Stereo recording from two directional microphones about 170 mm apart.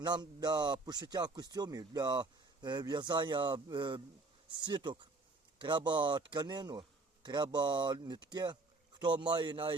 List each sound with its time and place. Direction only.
0.0 s speech: 25° right (ahead or behind)